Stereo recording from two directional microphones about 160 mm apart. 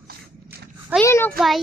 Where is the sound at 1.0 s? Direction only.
15° left (ahead or behind).